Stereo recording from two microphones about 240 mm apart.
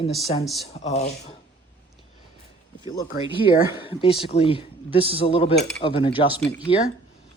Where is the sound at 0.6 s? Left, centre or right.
Left.